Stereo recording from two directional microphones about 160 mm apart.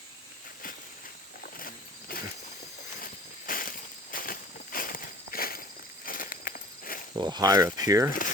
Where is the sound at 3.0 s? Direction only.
60° left (ahead or behind).